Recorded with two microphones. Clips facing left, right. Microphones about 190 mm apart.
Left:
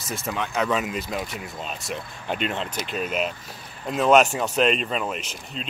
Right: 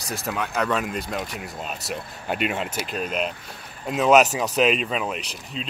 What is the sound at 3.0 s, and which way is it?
Speech, 5° left (ahead or behind).